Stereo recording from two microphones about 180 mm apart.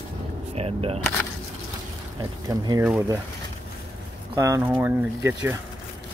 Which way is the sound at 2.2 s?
20° right (ahead or behind).